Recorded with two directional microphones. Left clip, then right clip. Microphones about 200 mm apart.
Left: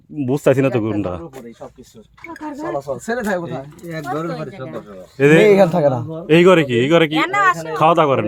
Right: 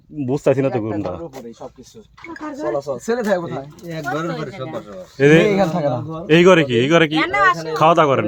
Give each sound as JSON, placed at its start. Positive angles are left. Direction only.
{"t": 0.2, "sound": "speech", "side_deg": 25}
{"t": 2.6, "sound": "speech", "side_deg": 30}
{"t": 3.8, "sound": "speech", "side_deg": -5}
{"t": 5.4, "sound": "speech", "side_deg": 55}
{"t": 6.2, "sound": "speech", "side_deg": 10}
{"t": 7.2, "sound": "speech", "side_deg": 40}
{"t": 7.7, "sound": "speech", "side_deg": 5}